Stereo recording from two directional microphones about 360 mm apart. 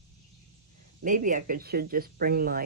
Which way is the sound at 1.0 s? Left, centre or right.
Right.